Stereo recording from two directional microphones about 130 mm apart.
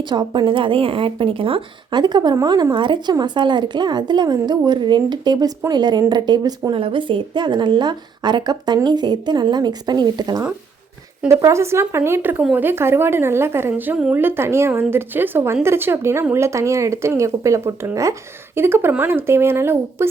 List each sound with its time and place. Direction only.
0.0 s speech: 35° right (ahead or behind); by 12.4 s 15° right (ahead or behind)
12.4 s speech: 5° right (ahead or behind)
12.6 s speech: 20° right (ahead or behind)